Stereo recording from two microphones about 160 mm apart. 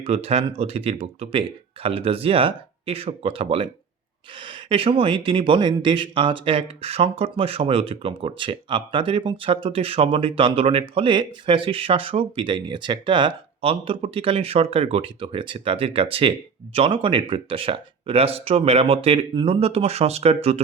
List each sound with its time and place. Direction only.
0.0 s speech: 40° right (ahead or behind)